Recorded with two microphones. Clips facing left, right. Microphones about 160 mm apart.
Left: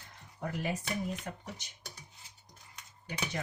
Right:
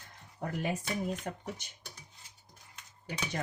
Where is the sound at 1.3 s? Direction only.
45° right (ahead or behind).